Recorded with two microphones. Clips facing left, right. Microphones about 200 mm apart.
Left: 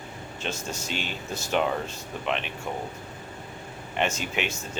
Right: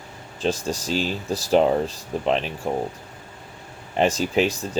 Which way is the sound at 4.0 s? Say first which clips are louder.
Right 8 dB; 35° right (ahead or behind).